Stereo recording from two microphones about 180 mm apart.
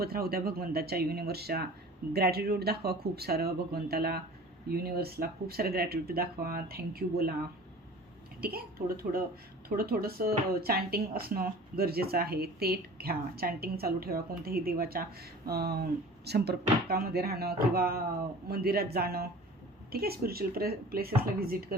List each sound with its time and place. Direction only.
0.0 s speech: 60° right (ahead or behind)
8.4 s speech: 55° right (ahead or behind)